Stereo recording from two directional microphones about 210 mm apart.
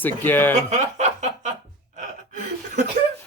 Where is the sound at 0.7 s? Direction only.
35° right (ahead or behind).